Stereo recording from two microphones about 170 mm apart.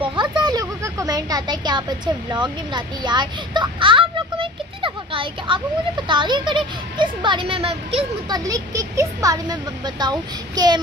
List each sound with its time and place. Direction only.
0.0 s a sound: 30° right (ahead or behind)
0.4 s speech: 25° right (ahead or behind)
8.5 s speech: 20° right (ahead or behind)